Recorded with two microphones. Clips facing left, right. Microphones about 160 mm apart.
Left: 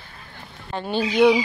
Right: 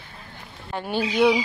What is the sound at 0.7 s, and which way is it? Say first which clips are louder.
Speech: left 2 dB; 10° right (ahead or behind).